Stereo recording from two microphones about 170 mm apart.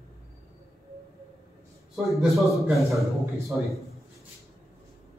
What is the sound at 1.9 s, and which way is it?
A man's voice, centre (ahead or behind).